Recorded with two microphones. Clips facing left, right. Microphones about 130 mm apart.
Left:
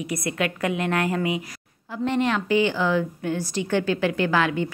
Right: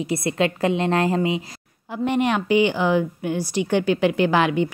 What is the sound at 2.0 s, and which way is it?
A woman's voice, 15° right (ahead or behind).